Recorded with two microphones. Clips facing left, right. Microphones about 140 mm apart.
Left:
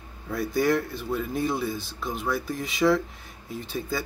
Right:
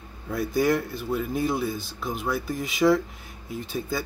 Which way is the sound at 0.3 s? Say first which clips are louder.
Right 1 dB; centre (ahead or behind).